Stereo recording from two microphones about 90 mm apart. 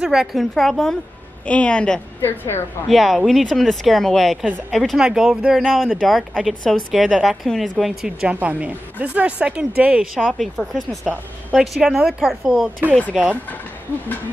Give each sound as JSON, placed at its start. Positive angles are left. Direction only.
{"t": 0.0, "sound": "speech", "side_deg": -5}
{"t": 2.2, "sound": "a woman's voice", "side_deg": 25}
{"t": 2.9, "sound": "speech", "side_deg": 0}
{"t": 8.4, "sound": "speech", "side_deg": -15}
{"t": 10.6, "sound": "speech", "side_deg": 0}